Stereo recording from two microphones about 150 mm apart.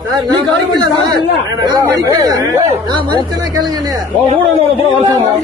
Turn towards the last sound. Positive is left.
turn(degrees=-30)  # may be behind; listen again after turning